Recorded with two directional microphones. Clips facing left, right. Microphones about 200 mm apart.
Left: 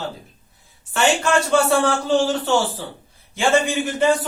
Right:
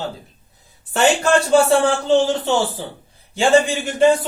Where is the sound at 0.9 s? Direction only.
35° right (ahead or behind).